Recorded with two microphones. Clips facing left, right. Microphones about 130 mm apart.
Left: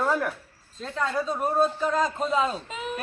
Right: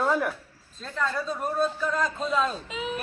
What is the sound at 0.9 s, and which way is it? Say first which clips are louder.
Speech: left 2 dB; 15° left (ahead or behind).